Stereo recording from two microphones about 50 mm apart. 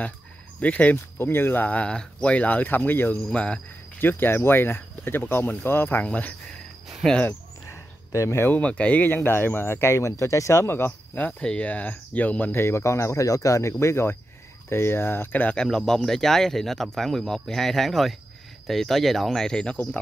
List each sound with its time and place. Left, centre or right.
0.6 s speech: left
1.1 s speech: left
1.7 s speech: left
2.3 s speech: left
3.3 s speech: left
4.0 s speech: left
6.0 s speech: left
7.7 s cricket: left
8.5 s speech: left
10.9 s speech: left
12.5 s speech: left
15.5 s speech: centre